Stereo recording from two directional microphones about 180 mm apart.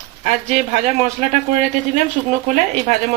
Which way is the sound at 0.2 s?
40° right (ahead or behind).